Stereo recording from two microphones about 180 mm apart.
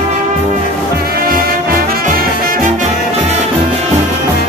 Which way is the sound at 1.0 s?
55° right (ahead or behind).